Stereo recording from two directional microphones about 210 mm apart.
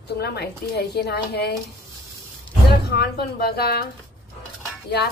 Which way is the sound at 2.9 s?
50° left (ahead or behind).